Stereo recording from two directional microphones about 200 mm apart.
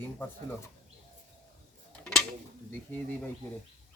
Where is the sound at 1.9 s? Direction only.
5° left (ahead or behind).